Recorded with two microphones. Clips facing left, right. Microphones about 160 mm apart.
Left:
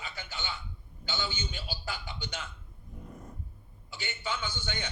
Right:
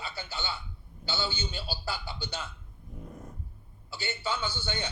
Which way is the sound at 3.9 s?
35° right (ahead or behind).